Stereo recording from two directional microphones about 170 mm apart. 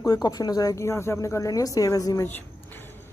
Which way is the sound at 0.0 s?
20° left (ahead or behind).